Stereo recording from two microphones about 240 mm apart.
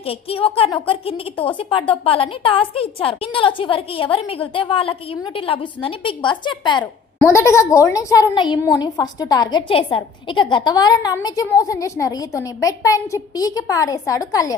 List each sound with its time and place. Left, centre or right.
0.0 s a woman's voice: left